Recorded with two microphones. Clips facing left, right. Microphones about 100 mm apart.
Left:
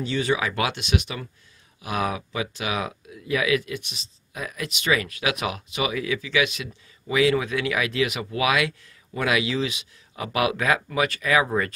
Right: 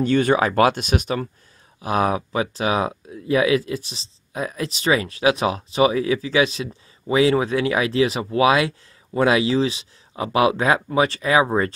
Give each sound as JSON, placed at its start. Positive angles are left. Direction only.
{"t": 0.0, "sound": "speech", "side_deg": -50}